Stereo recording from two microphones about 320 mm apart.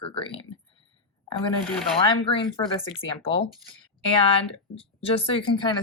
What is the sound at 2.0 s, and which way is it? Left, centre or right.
Speech, centre.